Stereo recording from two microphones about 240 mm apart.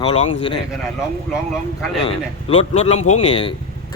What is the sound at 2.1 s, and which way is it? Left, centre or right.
Speech, left.